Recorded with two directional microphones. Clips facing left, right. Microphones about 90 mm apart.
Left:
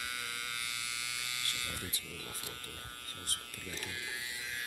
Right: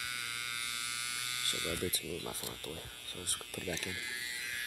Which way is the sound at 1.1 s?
40° right (ahead or behind).